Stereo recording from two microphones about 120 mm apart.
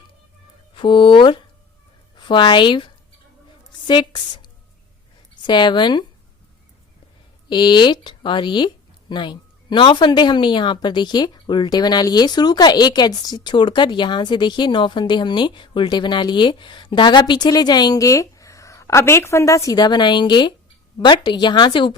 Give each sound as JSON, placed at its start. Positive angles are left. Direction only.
{"t": 0.8, "sound": "a woman's voice", "side_deg": 45}
{"t": 7.5, "sound": "speech", "side_deg": 40}